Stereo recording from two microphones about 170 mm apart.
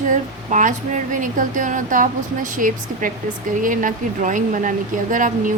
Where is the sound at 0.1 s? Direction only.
50° right (ahead or behind).